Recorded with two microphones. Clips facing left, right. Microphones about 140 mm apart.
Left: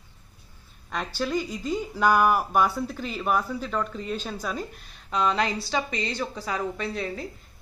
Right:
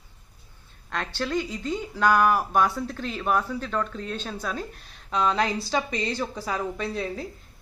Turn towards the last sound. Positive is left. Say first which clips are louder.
# right 1 dB
turn(degrees=0)  # may be behind; listen again after turning